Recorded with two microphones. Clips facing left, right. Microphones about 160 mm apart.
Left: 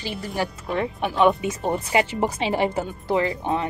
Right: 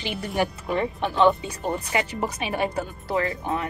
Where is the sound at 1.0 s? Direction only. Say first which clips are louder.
Left 1 dB; 10° left (ahead or behind).